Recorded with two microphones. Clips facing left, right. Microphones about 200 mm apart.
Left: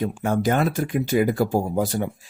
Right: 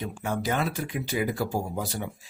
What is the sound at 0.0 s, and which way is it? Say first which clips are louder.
Speech: left 8 dB; 45° left (ahead or behind).